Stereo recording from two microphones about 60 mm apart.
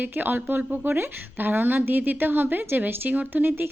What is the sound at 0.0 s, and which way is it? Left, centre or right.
Speech, right.